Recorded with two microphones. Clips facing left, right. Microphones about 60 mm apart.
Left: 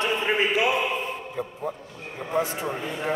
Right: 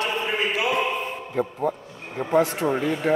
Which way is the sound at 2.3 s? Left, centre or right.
Right.